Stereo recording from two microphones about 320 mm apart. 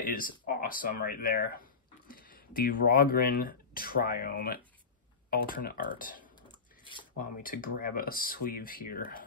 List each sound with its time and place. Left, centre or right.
0.0 s speech: left